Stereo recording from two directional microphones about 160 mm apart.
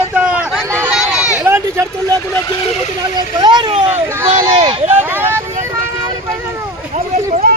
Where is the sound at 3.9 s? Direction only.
15° right (ahead or behind).